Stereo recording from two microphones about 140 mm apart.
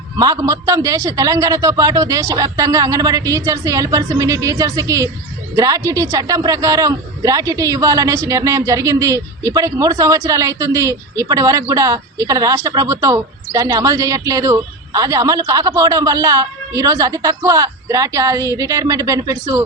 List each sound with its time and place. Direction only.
0.2 s a man's voice: 25° right (ahead or behind)